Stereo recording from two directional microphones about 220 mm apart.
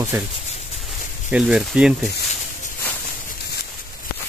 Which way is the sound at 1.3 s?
5° right (ahead or behind).